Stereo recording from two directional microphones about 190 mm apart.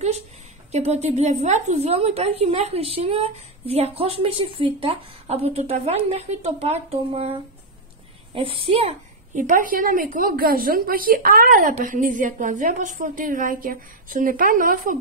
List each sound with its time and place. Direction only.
0.7 s a woman's voice: 35° right (ahead or behind)
8.4 s a woman's voice: 30° right (ahead or behind); by 15.0 s 45° right (ahead or behind)